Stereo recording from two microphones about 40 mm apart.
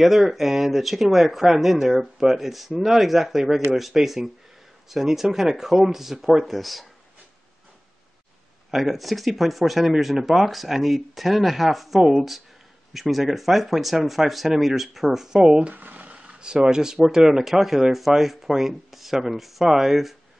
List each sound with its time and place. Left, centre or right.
0.0 s speech: centre
8.6 s speech: centre; by 15.7 s right
15.7 s a sound: right
16.2 s speech: right; by 20.2 s centre